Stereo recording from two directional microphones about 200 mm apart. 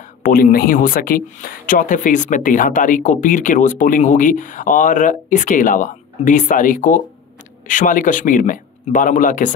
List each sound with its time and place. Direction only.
0.2 s a man's voice: 45° left (ahead or behind)